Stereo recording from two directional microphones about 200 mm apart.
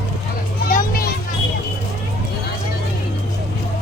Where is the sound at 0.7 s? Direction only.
45° left (ahead or behind).